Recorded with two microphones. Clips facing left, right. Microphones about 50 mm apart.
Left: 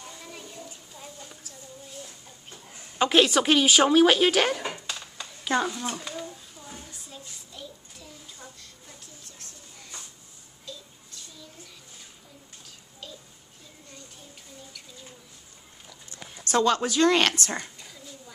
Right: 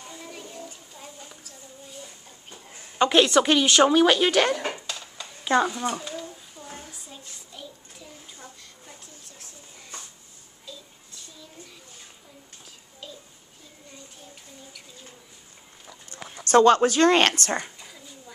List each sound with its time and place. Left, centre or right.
0.0 s a sound: centre
2.0 s chicken: centre
3.0 s speech: centre
5.6 s speech: centre
6.9 s child singing: centre
10.7 s child singing: centre
16.3 s a woman's voice: right
17.5 s speech: right
17.7 s cat: centre